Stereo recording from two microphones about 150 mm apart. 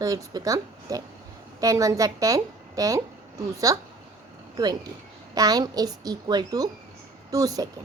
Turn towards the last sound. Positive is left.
turn(degrees=-25)  # may be behind; listen again after turning